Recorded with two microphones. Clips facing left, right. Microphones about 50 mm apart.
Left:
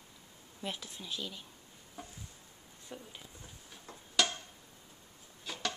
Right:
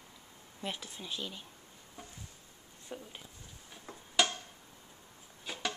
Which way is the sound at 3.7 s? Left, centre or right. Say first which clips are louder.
Right 1 dB; centre.